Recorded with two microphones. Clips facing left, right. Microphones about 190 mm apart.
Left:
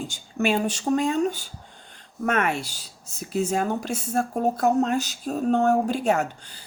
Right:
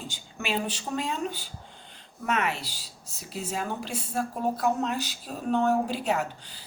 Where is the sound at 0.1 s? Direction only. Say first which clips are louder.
Left 8 dB; 50° left (ahead or behind).